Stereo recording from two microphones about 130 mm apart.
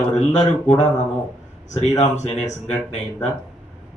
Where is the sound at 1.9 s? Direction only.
60° left (ahead or behind).